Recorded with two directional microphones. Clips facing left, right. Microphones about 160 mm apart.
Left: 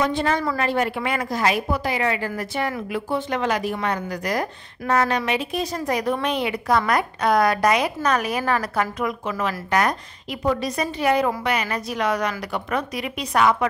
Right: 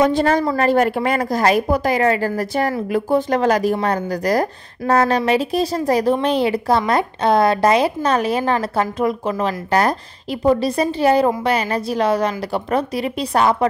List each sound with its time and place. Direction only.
0.0 s a woman's voice: 40° right (ahead or behind)